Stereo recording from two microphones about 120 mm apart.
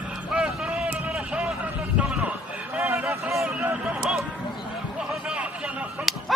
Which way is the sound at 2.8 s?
20° right (ahead or behind).